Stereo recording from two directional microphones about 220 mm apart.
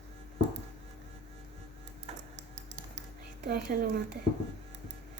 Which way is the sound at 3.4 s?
45° right (ahead or behind).